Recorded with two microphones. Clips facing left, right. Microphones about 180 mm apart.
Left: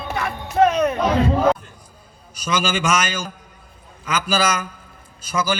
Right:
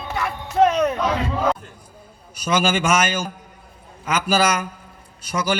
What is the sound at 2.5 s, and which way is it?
A man's voice, 55° right (ahead or behind).